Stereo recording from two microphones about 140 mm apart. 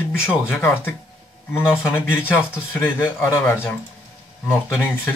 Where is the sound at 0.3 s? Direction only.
15° left (ahead or behind).